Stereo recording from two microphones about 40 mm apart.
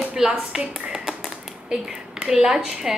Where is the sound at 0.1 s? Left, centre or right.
Right.